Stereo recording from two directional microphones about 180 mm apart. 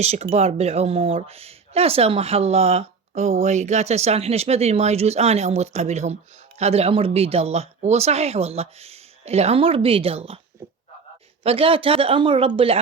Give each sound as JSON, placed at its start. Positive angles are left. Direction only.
{"t": 0.0, "sound": "speech", "side_deg": -35}
{"t": 11.4, "sound": "speech", "side_deg": -30}